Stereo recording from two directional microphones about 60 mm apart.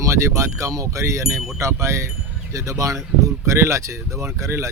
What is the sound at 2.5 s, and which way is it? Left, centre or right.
Speech, right.